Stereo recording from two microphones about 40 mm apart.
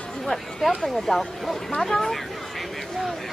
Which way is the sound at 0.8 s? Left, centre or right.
Centre.